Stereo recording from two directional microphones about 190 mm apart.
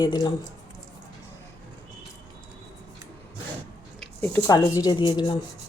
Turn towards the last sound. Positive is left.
turn(degrees=25)  # may be behind; listen again after turning